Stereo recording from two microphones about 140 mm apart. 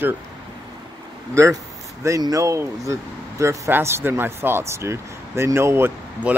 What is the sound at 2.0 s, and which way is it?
Speech, 25° right (ahead or behind).